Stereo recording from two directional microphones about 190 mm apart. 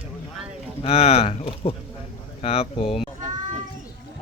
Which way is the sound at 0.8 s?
30° left (ahead or behind).